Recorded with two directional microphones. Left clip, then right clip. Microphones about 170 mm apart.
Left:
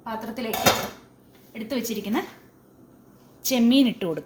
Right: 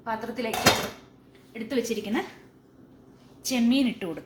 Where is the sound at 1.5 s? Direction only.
90° left.